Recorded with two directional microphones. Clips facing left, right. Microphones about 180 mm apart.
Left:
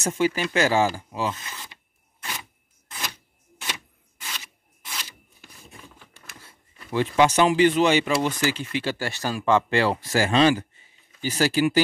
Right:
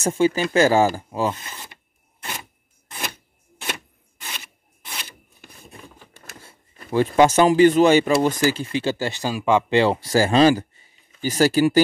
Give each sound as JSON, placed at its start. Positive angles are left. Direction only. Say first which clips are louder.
{"t": 0.0, "sound": "speech", "louder": "right 4 dB", "side_deg": -30}
{"t": 1.3, "sound": "speech", "louder": "right 1 dB", "side_deg": -30}
{"t": 3.6, "sound": "a sound", "louder": "right 4 dB", "side_deg": -55}
{"t": 6.8, "sound": "speech", "louder": "right 4 dB", "side_deg": -45}